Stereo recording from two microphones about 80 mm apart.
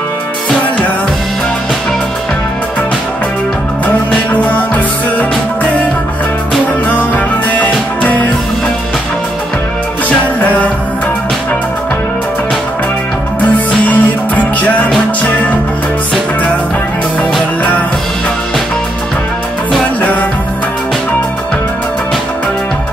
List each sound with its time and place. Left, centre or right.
3.8 s music: centre
7.5 s music: centre
10.0 s music: centre
13.4 s music: centre
20.0 s music: left